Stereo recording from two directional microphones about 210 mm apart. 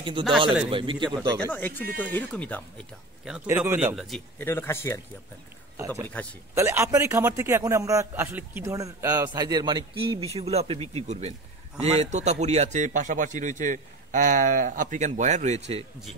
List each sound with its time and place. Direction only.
0.7 s speech: 25° right (ahead or behind)
1.4 s speech: 10° left (ahead or behind)
3.3 s a man's voice: 5° right (ahead or behind)
4.4 s speech: 10° left (ahead or behind)
6.2 s speech: 5° left (ahead or behind)
6.5 s a man's voice: 15° right (ahead or behind); by 15.8 s 30° right (ahead or behind)